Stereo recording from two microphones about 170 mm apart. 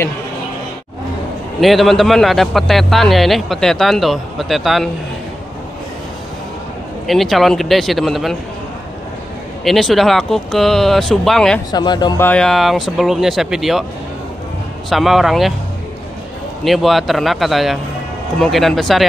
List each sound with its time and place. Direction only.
1.6 s a man's voice: centre (ahead or behind)
7.1 s a man's voice: centre (ahead or behind)
9.7 s a man's voice: centre (ahead or behind)
11.7 s speech: 25° left (ahead or behind)
12.2 s a man's voice: 5° left (ahead or behind)
14.9 s a man's voice: centre (ahead or behind)
16.6 s a man's voice: centre (ahead or behind)